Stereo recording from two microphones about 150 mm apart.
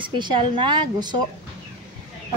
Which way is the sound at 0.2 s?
30° right (ahead or behind).